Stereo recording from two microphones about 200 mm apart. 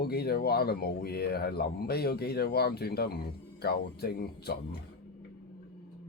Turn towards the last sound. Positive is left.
turn(degrees=50)  # may be behind; listen again after turning